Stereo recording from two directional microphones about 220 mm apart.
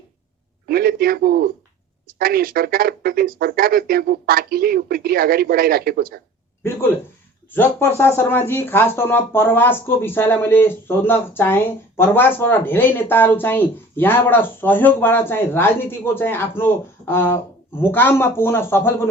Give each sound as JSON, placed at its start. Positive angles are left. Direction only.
{"t": 0.7, "sound": "speech", "side_deg": -45}
{"t": 7.5, "sound": "speech", "side_deg": 10}